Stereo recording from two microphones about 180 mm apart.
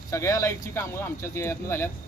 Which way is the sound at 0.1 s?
15° left (ahead or behind).